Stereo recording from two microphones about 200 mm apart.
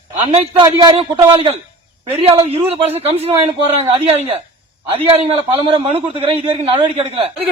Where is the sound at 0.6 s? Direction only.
20° right (ahead or behind).